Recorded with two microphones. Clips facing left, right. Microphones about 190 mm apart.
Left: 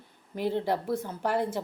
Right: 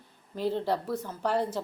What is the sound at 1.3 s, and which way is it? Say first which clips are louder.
Speech: even; 10° left (ahead or behind).